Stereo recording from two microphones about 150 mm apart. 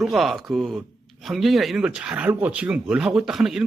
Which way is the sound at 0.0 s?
Centre (ahead or behind).